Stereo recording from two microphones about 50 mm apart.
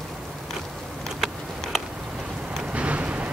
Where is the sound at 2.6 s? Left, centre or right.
Right.